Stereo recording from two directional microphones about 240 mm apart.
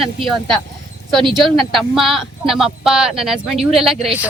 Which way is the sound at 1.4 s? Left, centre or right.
Centre.